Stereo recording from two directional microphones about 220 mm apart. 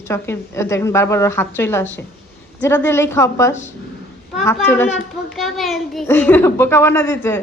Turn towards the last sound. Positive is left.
turn(degrees=10)  # may be behind; listen again after turning